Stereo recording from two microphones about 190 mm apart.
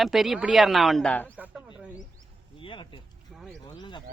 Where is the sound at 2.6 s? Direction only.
25° left (ahead or behind).